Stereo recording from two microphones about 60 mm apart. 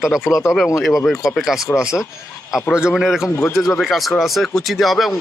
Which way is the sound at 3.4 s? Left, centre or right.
Left.